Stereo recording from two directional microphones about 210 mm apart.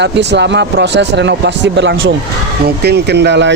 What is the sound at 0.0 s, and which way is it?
Speech, 55° right (ahead or behind).